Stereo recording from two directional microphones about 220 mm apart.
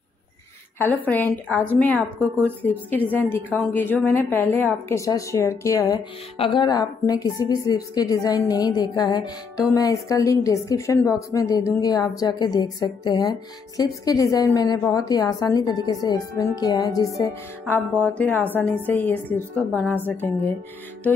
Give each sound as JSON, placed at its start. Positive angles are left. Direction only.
{"t": 1.0, "sound": "a woman's voice", "side_deg": 5}